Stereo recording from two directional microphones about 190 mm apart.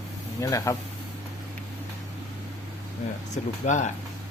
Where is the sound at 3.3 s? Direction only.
40° left (ahead or behind).